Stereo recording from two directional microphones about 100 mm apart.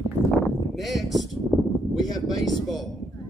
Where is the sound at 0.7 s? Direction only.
Centre (ahead or behind).